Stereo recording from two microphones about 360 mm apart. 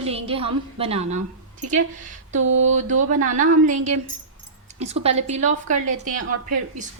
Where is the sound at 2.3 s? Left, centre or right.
Right.